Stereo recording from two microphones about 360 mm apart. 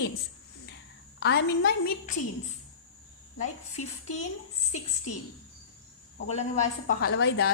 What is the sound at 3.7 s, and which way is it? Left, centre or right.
Speech, centre.